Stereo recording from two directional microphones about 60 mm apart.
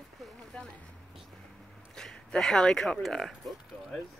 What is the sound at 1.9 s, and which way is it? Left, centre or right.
Speech, centre.